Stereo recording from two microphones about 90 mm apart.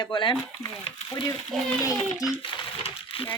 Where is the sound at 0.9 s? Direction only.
50° left (ahead or behind).